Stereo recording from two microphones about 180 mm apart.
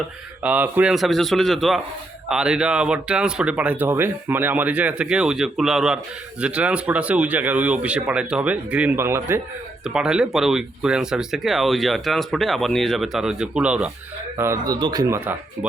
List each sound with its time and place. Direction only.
0.4 s speech: 10° right (ahead or behind)